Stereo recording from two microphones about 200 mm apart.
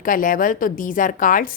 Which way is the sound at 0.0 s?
40° left (ahead or behind).